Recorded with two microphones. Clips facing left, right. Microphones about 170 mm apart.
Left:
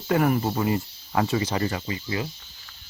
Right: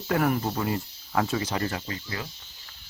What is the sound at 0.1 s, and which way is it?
Speech, 5° left (ahead or behind).